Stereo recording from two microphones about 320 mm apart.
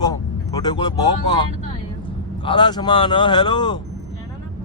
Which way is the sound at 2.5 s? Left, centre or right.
Centre.